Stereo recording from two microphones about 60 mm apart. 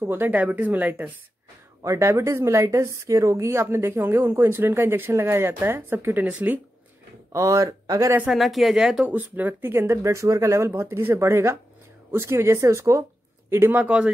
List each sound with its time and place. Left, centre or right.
0.3 s speech: right
1.8 s a woman's voice: right
7.3 s speech: right
8.3 s speech: centre
9.1 s a woman's voice: right
13.7 s speech: right